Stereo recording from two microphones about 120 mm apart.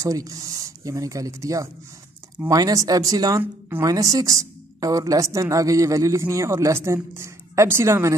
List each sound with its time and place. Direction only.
0.0 s a woman's voice: 30° right (ahead or behind)